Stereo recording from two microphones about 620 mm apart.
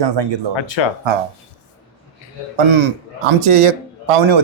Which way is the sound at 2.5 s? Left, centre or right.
Right.